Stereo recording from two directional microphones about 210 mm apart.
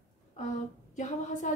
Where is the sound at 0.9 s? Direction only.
35° left (ahead or behind).